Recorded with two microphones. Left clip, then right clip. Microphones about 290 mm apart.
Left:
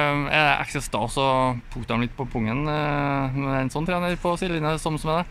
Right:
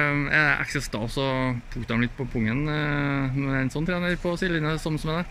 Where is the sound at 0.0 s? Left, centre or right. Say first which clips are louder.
Left 1 dB; centre.